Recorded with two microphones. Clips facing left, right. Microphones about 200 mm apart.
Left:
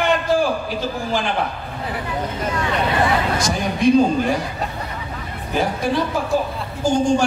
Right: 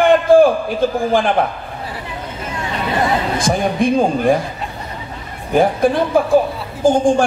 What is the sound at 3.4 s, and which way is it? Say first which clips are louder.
Speech: right 5 dB; 50° right (ahead or behind).